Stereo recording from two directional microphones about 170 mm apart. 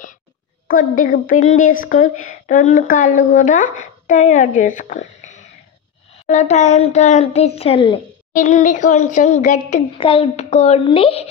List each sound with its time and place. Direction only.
0.7 s a woman's voice: 55° left (ahead or behind); by 8.0 s 30° left (ahead or behind)
8.4 s a woman's voice: 45° left (ahead or behind)
9.9 s a child's voice: 30° left (ahead or behind)